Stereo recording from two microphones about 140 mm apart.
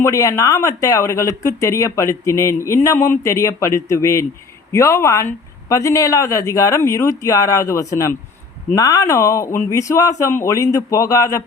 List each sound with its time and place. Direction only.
0.0 s speech: 20° left (ahead or behind)